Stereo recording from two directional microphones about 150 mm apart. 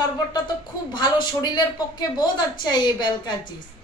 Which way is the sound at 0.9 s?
30° left (ahead or behind).